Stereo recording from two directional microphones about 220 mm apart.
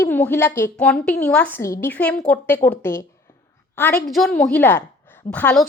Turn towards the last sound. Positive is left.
turn(degrees=5)  # may be behind; listen again after turning